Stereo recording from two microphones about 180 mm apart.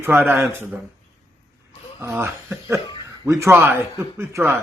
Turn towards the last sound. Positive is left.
turn(degrees=-15)  # may be behind; listen again after turning